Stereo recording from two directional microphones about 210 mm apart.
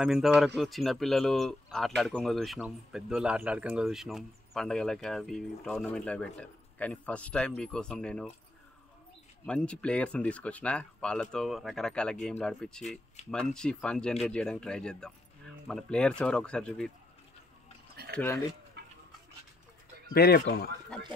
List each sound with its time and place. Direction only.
0.0 s speech: 5° right (ahead or behind)
9.5 s speech: 5° left (ahead or behind)
18.1 s speech: 10° left (ahead or behind)
18.8 s a sound: 50° right (ahead or behind)
20.1 s speech: 50° left (ahead or behind)
20.9 s speech: 5° left (ahead or behind)